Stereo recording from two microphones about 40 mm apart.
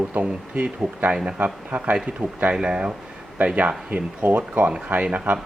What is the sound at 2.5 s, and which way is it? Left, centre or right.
Speech, right.